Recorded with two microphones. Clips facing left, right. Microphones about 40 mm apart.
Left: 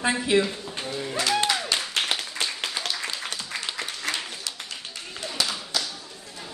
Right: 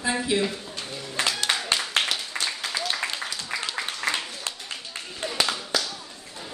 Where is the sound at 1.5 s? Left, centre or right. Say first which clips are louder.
Even; right.